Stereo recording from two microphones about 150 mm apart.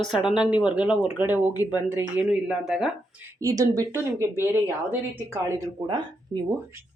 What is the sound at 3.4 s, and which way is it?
Speech, 25° right (ahead or behind).